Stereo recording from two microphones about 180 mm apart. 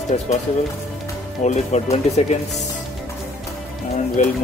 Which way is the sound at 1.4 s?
40° left (ahead or behind).